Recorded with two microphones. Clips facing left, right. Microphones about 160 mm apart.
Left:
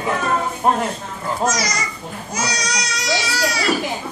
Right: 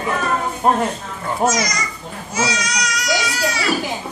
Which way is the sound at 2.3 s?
40° left (ahead or behind).